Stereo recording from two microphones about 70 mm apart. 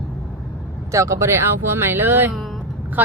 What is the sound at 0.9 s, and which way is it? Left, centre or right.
Speech, right.